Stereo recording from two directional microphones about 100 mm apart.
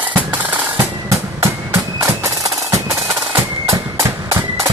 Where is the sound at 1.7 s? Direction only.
25° right (ahead or behind).